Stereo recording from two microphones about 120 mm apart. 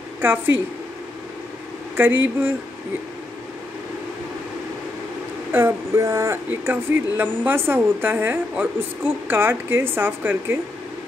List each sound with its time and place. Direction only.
2.0 s speech: 15° right (ahead or behind)
5.5 s speech: 20° right (ahead or behind)